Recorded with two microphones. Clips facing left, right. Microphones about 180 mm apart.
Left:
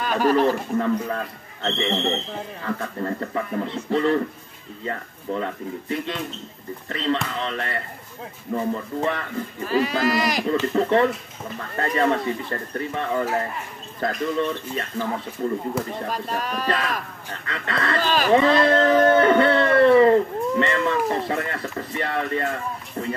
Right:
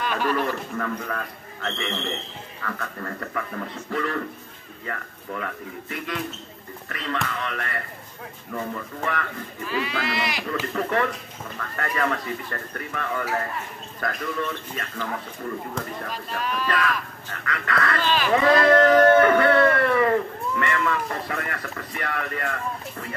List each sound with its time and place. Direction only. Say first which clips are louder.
0.0 s a man's voice: left 6 dB; 40° left (ahead or behind)
0.7 s speech: left 6 dB; 25° left (ahead or behind)
9.7 s speech: left 7 dB; 40° left (ahead or behind)
10.7 s speech: left 4 dB; 25° left (ahead or behind)
15.8 s speech: left 4 dB; 5° left (ahead or behind)
16.1 s speech: left 3 dB; 40° left (ahead or behind)
17.5 s speech: right 1 dB; 25° left (ahead or behind)
18.0 s speech: left 4 dB; 45° left (ahead or behind)
18.3 s a sound: even; 25° left (ahead or behind)
23.0 s speech: left 8 dB; 25° left (ahead or behind)